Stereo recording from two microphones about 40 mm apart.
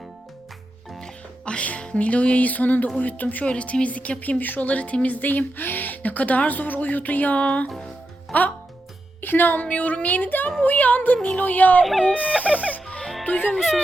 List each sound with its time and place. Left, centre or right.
1.5 s speech: left
3.4 s speech: left
4.7 s speech: left
7.7 s music: centre
8.3 s speech: left
9.2 s speech: left
9.6 s speech: left
10.2 s speech: left
13.2 s speech: left